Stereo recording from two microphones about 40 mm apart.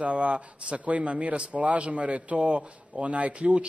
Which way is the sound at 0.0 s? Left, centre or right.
Right.